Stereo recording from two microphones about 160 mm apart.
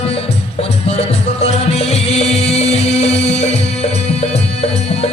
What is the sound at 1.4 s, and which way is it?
Music, 40° left (ahead or behind).